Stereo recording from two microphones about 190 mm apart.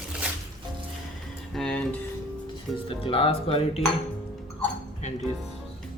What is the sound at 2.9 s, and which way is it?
Speech, 30° left (ahead or behind).